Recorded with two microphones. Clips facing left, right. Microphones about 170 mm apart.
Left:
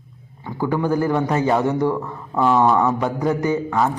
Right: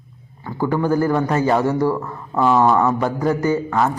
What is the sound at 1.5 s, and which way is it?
Speech, 20° left (ahead or behind).